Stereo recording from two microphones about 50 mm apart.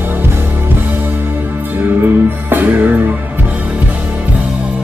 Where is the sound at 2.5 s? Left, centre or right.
Right.